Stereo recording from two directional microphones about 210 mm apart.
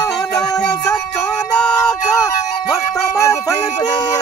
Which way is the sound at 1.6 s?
5° left (ahead or behind).